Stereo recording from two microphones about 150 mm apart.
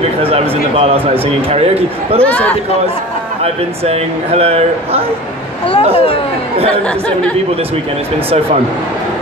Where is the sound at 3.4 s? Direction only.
45° right (ahead or behind).